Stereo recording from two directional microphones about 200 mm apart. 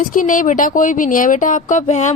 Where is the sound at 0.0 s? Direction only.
40° left (ahead or behind).